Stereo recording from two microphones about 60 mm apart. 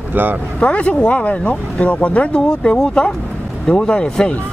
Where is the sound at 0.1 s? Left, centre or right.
Right.